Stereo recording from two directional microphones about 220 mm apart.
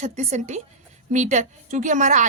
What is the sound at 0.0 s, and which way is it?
A woman's voice, 30° right (ahead or behind).